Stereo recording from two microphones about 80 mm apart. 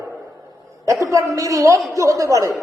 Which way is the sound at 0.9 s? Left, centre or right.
Right.